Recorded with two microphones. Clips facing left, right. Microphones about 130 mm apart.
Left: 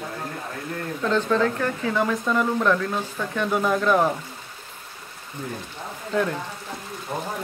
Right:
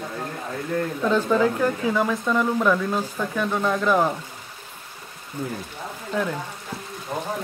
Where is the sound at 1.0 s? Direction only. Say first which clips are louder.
Right 1 dB; 10° right (ahead or behind).